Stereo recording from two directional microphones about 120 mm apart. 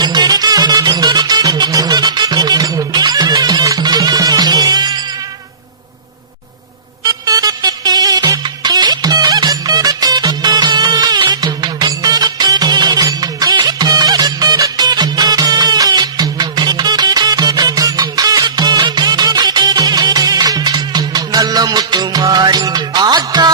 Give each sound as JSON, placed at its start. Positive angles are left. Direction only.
{"t": 0.0, "sound": "music", "side_deg": -35}
{"t": 7.0, "sound": "music", "side_deg": -30}